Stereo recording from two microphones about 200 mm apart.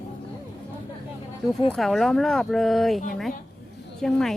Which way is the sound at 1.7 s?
Centre (ahead or behind).